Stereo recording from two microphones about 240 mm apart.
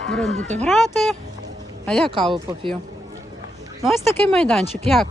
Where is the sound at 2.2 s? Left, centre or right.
Centre.